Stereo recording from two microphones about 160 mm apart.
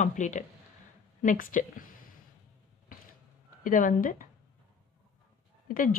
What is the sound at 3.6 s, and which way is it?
Speech, 60° left (ahead or behind).